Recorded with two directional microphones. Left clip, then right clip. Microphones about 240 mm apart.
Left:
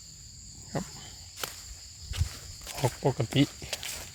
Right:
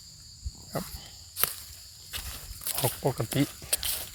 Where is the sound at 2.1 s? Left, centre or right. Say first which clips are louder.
Right 2 dB; right.